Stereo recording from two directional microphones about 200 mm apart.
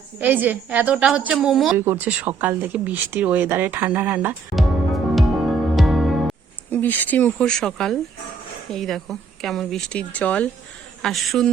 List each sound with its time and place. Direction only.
0.2 s speech: 10° right (ahead or behind)
5.1 s music: centre (ahead or behind)
6.7 s speech: 10° left (ahead or behind)